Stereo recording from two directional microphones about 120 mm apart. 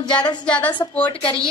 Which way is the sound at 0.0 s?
35° left (ahead or behind).